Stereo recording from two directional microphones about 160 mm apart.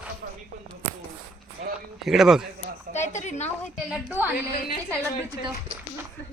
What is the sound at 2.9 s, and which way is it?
Speech, 45° left (ahead or behind).